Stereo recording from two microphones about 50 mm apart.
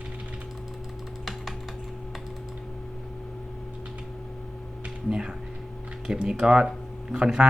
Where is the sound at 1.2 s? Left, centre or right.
Centre.